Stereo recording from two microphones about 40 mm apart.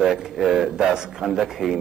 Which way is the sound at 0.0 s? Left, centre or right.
Centre.